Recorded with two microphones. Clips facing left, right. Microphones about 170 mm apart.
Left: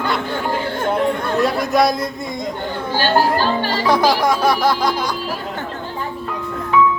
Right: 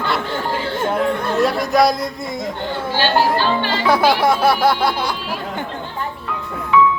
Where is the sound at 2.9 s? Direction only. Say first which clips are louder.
Left 1 dB; 40° left (ahead or behind).